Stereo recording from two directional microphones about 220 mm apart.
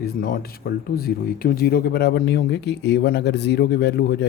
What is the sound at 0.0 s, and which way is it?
Speech, 40° left (ahead or behind).